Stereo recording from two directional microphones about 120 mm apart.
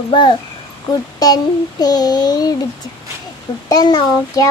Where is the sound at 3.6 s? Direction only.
35° left (ahead or behind).